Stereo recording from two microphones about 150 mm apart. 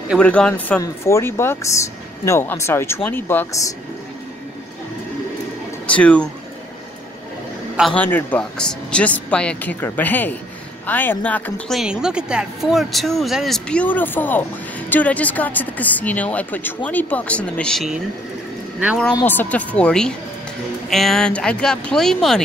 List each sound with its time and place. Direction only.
0.2 s speech: 5° left (ahead or behind)
5.9 s speech: 10° left (ahead or behind)
7.9 s a woman's voice: 10° left (ahead or behind)
19.2 s a woman's voice: 10° left (ahead or behind)